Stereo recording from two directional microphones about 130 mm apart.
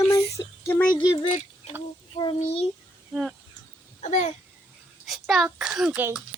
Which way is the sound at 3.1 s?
Centre (ahead or behind).